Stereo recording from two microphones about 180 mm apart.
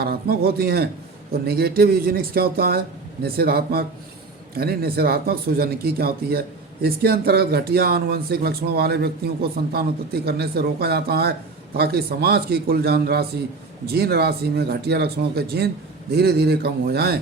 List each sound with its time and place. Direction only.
0.0 s speech: 60° right (ahead or behind)